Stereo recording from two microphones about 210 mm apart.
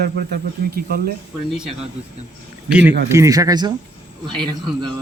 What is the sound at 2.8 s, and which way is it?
Speech, 55° right (ahead or behind).